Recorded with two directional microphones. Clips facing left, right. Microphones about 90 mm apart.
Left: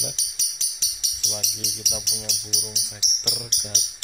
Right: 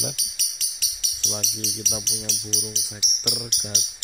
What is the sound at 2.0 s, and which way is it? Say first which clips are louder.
Speech: right 2 dB; 15° left (ahead or behind).